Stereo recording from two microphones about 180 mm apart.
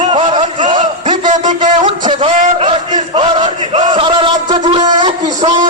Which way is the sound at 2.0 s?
30° right (ahead or behind).